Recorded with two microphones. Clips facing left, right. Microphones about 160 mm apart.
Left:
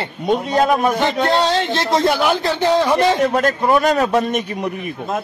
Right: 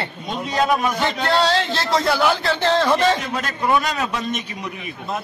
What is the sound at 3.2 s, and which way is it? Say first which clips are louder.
A man's voice: left 9 dB; 55° left (ahead or behind).